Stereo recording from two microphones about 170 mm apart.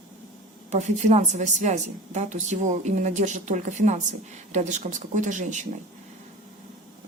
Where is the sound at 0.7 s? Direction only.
40° right (ahead or behind).